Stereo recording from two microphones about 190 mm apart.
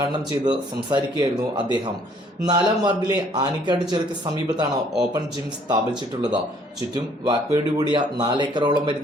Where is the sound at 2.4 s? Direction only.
20° right (ahead or behind).